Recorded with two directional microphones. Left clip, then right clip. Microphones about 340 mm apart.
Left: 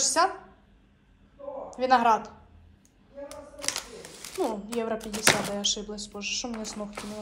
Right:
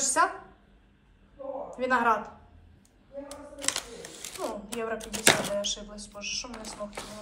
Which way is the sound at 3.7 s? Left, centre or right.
Centre.